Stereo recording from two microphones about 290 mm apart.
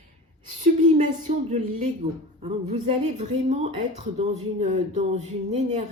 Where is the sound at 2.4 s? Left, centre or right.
Right.